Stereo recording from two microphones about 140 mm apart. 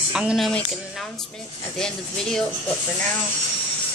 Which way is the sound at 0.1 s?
5° right (ahead or behind).